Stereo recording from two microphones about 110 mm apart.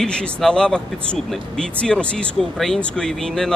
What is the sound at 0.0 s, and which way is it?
Speech, 5° left (ahead or behind).